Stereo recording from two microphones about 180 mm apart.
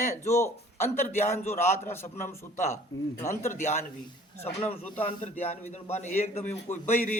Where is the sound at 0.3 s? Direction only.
15° left (ahead or behind).